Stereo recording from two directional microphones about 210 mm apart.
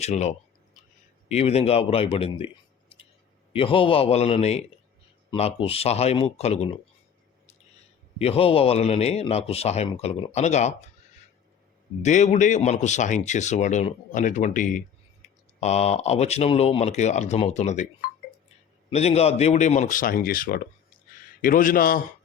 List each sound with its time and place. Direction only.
0.0 s a sound: 30° left (ahead or behind)
1.3 s a man's voice: 30° left (ahead or behind)
3.5 s a man's voice: 25° left (ahead or behind)
8.2 s a man's voice: 30° left (ahead or behind)
12.0 s speech: 35° left (ahead or behind)
18.9 s speech: 30° left (ahead or behind)